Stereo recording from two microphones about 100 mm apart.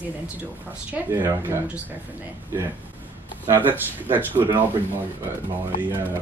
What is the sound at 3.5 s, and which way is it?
A woman's voice, 20° right (ahead or behind).